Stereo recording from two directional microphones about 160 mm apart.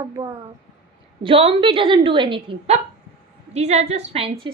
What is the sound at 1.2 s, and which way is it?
A woman's voice, 35° right (ahead or behind).